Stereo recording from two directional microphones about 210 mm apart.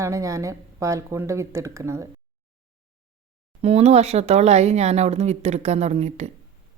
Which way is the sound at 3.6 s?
30° right (ahead or behind).